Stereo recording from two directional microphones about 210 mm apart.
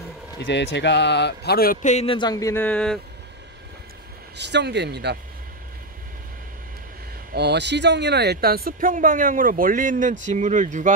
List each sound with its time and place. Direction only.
0.4 s a man's voice: 55° left (ahead or behind); by 3.0 s 5° left (ahead or behind)
4.4 s speech: 55° right (ahead or behind)
7.3 s speech: 55° right (ahead or behind); by 10.9 s 35° right (ahead or behind)